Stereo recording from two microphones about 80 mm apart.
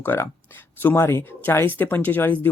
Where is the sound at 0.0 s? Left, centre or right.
Left.